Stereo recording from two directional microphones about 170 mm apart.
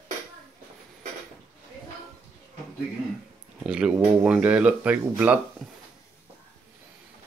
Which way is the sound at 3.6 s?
5° right (ahead or behind).